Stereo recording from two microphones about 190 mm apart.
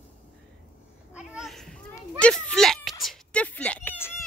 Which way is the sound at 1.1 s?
5° right (ahead or behind).